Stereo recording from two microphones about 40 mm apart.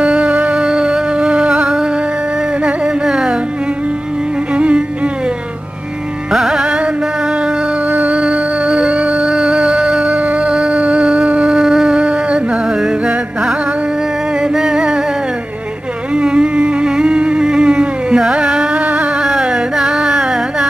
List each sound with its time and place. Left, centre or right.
0.0 s music: right
0.6 s music: right
3.1 s music: centre
4.6 s music: right
6.3 s music: centre
8.1 s music: right
10.2 s a sound: right
10.5 s music: right
11.5 s music: centre
12.0 s music: right
12.6 s music: centre
16.2 s a sound: right
18.7 s a sound: right
19.2 s carnatic music: right